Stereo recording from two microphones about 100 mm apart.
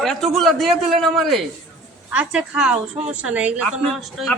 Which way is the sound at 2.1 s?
10° right (ahead or behind).